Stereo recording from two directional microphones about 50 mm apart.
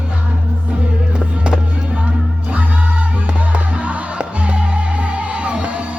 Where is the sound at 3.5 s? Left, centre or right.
Right.